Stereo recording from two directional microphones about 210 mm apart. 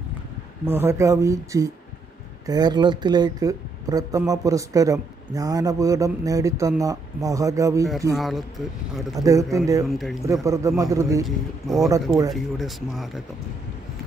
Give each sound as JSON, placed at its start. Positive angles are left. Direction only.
{"t": 0.7, "sound": "speech", "side_deg": -10}
{"t": 8.2, "sound": "speech", "side_deg": 0}
{"t": 9.1, "sound": "speech", "side_deg": -15}
{"t": 9.8, "sound": "speech", "side_deg": 0}
{"t": 10.2, "sound": "speech", "side_deg": -15}
{"t": 11.2, "sound": "speech", "side_deg": 0}